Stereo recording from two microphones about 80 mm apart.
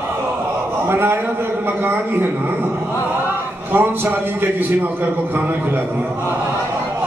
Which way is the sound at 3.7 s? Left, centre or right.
Right.